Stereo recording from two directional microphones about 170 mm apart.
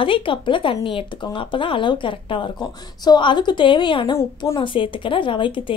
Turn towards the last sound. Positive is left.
turn(degrees=30)  # may be behind; listen again after turning